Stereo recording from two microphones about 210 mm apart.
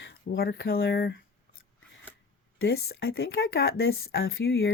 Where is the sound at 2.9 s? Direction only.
50° left (ahead or behind); by 4.7 s 65° left (ahead or behind).